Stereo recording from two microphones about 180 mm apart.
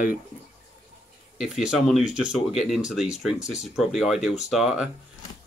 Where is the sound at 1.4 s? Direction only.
Centre (ahead or behind).